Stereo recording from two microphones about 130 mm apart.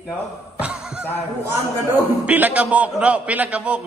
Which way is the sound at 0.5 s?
10° right (ahead or behind).